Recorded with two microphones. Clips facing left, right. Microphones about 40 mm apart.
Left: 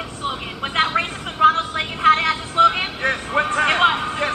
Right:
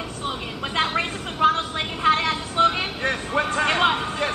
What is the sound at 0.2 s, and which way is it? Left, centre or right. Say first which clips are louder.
Vehicle: left 4 dB; left.